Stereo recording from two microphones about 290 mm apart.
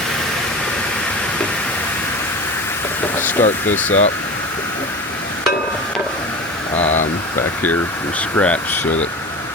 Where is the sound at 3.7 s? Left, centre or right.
Centre.